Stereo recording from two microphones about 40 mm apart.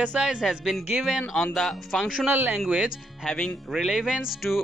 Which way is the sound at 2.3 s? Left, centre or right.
Right.